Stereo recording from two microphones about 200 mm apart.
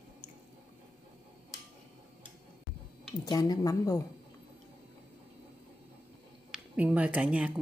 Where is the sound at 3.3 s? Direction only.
20° left (ahead or behind).